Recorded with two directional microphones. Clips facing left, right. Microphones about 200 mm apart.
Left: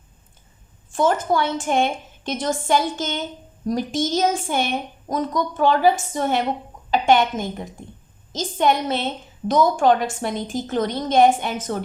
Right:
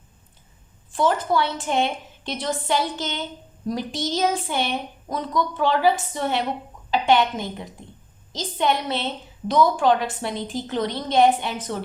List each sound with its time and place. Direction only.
0.9 s speech: 45° left (ahead or behind)